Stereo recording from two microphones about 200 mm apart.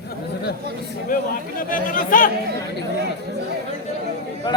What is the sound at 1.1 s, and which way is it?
Speech, 45° left (ahead or behind).